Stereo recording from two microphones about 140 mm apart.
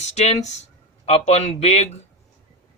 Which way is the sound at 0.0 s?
50° left (ahead or behind).